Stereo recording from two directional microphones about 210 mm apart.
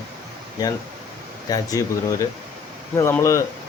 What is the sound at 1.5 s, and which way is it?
Speech, 15° left (ahead or behind).